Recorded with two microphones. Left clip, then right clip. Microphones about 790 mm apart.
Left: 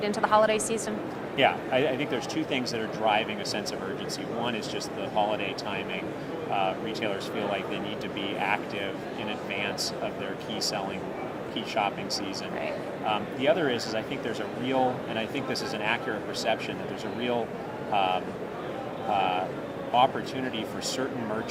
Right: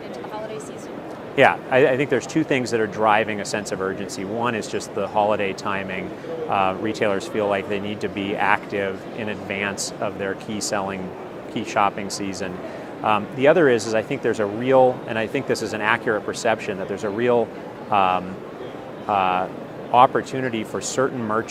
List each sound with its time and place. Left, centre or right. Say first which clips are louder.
0.3 s speech: left 11 dB; left
1.4 s speech: right 8 dB; right
6.5 s speech: right 7 dB; right
11.7 s speech: right 8 dB; right
21.0 s speech: right 13 dB; right